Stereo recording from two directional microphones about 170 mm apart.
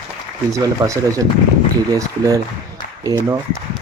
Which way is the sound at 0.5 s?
20° right (ahead or behind).